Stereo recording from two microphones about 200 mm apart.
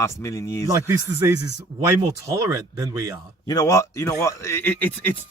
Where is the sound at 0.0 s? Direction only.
15° left (ahead or behind).